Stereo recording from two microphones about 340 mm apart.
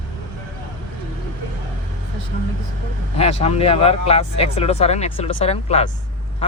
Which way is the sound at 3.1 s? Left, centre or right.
Centre.